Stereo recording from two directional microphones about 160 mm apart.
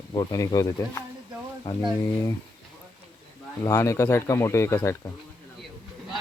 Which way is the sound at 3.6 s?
20° left (ahead or behind).